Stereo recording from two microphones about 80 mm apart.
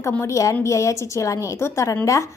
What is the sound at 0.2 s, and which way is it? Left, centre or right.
A woman's voice, left.